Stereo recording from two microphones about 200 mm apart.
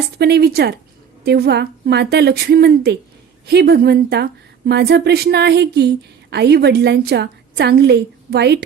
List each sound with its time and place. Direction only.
0.2 s a woman's voice: 55° right (ahead or behind)